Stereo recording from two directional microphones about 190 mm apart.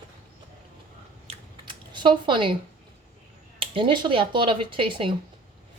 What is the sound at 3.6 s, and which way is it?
Speech, 25° right (ahead or behind).